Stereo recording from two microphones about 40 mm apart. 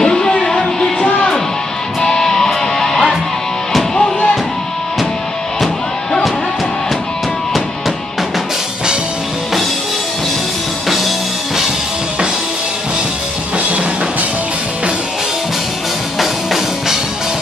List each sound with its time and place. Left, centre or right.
0.0 s music: centre
2.0 s music: centre
16.2 s music: centre